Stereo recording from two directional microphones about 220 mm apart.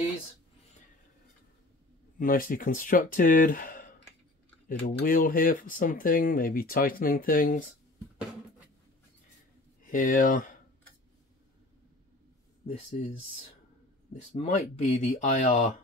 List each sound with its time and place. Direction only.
2.1 s speech: 40° left (ahead or behind)
9.8 s speech: 40° left (ahead or behind)
12.6 s speech: 30° left (ahead or behind)
14.1 s speech: 30° left (ahead or behind)